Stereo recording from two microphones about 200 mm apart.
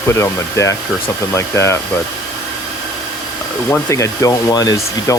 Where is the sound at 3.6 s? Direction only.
10° left (ahead or behind).